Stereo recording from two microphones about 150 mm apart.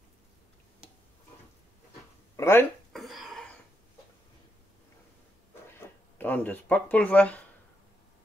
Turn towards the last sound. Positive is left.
turn(degrees=10)  # may be behind; listen again after turning